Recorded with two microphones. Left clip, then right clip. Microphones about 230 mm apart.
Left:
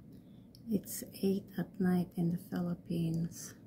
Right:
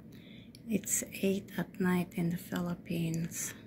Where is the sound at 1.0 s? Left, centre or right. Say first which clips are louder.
Right 2 dB; centre.